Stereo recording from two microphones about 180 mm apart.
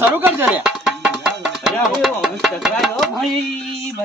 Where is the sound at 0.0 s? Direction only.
10° right (ahead or behind).